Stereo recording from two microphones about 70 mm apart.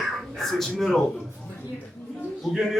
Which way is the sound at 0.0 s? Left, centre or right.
Centre.